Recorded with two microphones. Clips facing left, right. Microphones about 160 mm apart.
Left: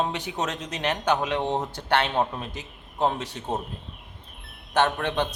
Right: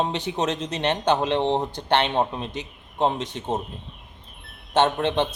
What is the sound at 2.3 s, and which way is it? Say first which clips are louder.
Speech: right 4 dB; centre (ahead or behind).